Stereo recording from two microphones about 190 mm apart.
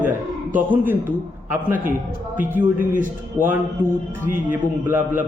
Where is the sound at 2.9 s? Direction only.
45° right (ahead or behind).